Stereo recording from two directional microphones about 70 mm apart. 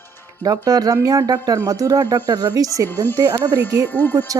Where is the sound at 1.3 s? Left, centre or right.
Right.